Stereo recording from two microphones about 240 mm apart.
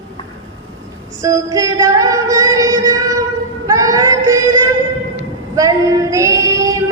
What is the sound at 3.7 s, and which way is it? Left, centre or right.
Child singing, centre.